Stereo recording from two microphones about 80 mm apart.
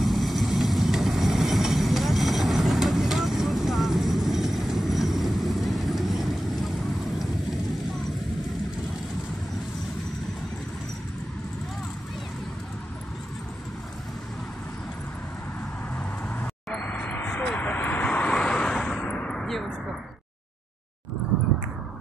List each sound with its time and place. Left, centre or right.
0.0 s vehicle: centre
16.8 s vehicle: centre
18.9 s a sound: centre